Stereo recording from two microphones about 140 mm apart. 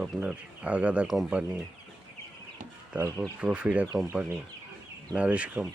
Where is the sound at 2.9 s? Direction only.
15° right (ahead or behind).